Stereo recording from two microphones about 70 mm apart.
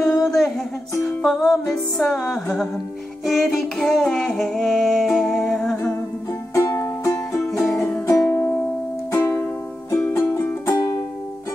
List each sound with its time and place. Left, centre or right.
0.0 s a sound: centre
1.0 s music: centre
6.5 s music: left
7.4 s music: centre
8.1 s music: left